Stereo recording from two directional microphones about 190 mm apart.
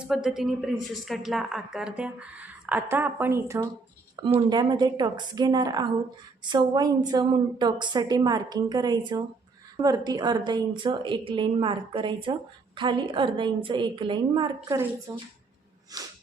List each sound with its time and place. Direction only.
0.0 s a woman's voice: centre (ahead or behind); by 16.1 s 20° right (ahead or behind)